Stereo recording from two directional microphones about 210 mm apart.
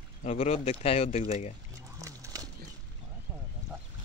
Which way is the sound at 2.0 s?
15° right (ahead or behind).